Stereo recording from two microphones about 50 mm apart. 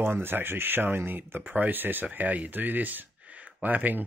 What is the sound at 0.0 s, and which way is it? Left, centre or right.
Speech, right.